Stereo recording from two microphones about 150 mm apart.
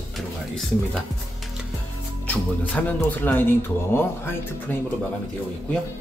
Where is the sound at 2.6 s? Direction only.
10° left (ahead or behind).